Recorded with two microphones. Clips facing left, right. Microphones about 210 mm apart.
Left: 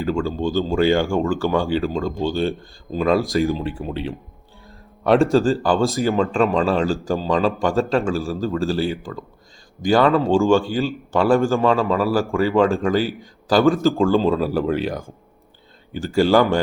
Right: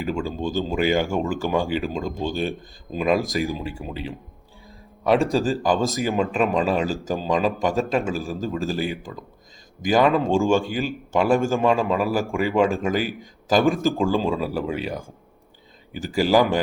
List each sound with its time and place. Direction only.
0.0 s speech: 15° right (ahead or behind)
3.4 s speech: centre (ahead or behind)
5.3 s speech: 15° right (ahead or behind)
14.3 s speech: centre (ahead or behind)